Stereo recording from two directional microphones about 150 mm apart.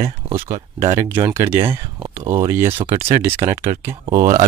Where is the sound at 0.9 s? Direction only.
20° right (ahead or behind).